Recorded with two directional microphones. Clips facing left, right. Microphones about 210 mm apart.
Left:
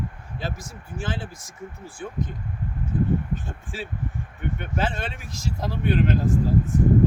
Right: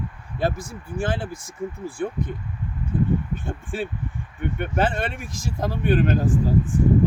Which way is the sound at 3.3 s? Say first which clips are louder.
Right 3 dB; 55° right (ahead or behind).